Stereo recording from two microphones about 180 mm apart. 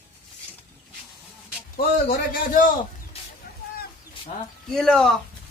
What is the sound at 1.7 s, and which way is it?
Speech, 50° left (ahead or behind).